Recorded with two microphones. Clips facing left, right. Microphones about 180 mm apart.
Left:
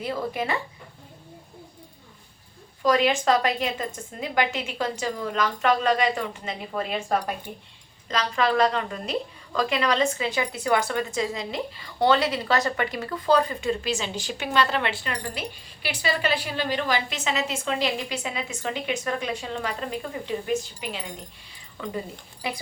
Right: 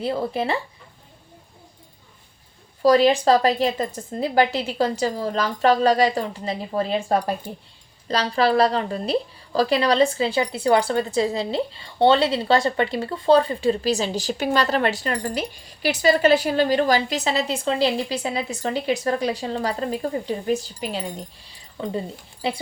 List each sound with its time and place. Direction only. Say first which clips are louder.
0.0 s speech: right 4 dB; 30° right (ahead or behind)
2.8 s a woman's voice: right 5 dB; 35° right (ahead or behind)